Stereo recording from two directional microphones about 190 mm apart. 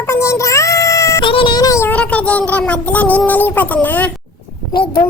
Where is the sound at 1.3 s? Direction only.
25° left (ahead or behind); by 4.1 s 10° left (ahead or behind).